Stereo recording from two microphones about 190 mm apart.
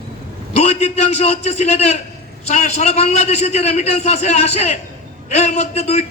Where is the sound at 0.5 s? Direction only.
35° left (ahead or behind).